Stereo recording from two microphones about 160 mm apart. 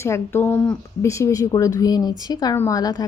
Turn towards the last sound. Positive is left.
turn(degrees=25)  # may be behind; listen again after turning